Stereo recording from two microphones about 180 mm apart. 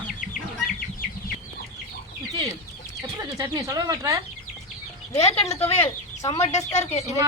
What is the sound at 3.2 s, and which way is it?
Speech, 20° right (ahead or behind).